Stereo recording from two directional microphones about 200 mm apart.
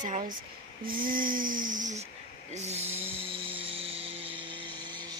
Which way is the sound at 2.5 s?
35° right (ahead or behind).